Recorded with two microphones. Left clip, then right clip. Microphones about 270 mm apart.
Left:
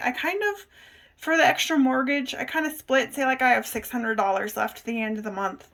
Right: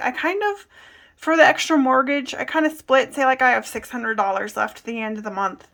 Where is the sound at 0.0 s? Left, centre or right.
Centre.